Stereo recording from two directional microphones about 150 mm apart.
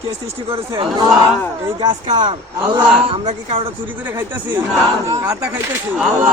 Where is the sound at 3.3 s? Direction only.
45° right (ahead or behind).